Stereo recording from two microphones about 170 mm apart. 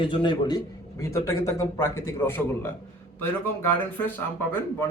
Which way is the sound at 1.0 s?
15° left (ahead or behind).